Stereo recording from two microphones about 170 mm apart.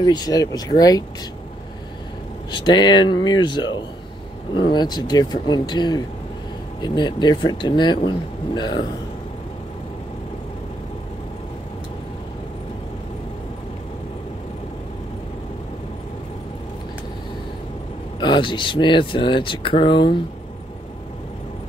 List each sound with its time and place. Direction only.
0.0 s speech: 25° left (ahead or behind)
2.5 s speech: 25° left (ahead or behind)
18.2 s speech: 30° left (ahead or behind)